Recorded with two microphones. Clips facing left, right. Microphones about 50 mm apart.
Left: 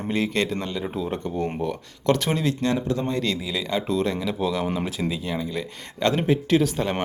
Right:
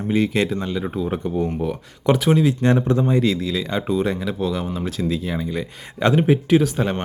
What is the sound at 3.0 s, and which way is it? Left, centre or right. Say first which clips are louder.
Speech: right 7 dB; centre.